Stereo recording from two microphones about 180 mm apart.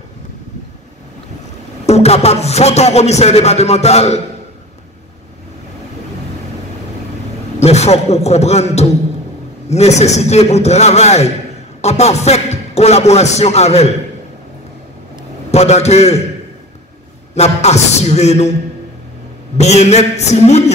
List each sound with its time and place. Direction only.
1.9 s speech: 35° left (ahead or behind)
7.5 s a man's voice: 35° left (ahead or behind)
15.5 s speech: 35° left (ahead or behind)
17.3 s speech: 35° left (ahead or behind)
19.5 s speech: 35° left (ahead or behind)